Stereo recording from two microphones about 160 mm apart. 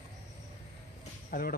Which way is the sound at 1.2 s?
60° left (ahead or behind).